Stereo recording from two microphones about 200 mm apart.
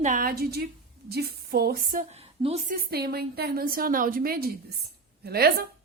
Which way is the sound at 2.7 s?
50° right (ahead or behind).